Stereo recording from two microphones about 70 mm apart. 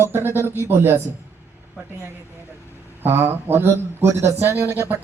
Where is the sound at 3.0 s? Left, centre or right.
Right.